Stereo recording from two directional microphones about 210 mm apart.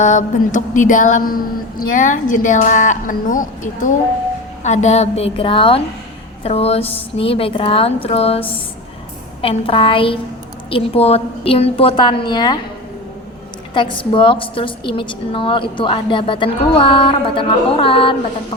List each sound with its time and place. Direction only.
0.0 s a woman's voice: 35° left (ahead or behind); by 12.5 s 20° left (ahead or behind)
13.7 s a woman's voice: 25° left (ahead or behind)